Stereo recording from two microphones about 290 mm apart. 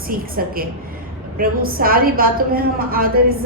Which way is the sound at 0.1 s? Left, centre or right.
Right.